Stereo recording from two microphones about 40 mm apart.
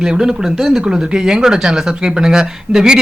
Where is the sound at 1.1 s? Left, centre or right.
Right.